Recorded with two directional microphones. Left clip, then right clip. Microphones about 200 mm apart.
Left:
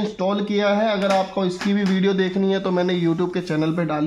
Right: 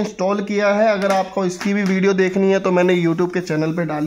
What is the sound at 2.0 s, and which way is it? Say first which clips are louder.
Speech: right 5 dB; 15° right (ahead or behind).